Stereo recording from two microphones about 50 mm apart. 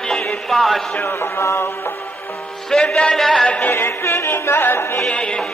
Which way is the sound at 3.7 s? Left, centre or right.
Left.